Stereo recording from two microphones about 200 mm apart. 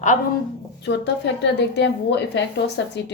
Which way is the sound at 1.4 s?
60° left (ahead or behind).